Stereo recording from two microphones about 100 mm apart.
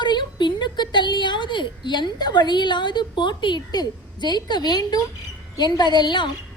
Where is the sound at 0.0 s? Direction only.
50° left (ahead or behind).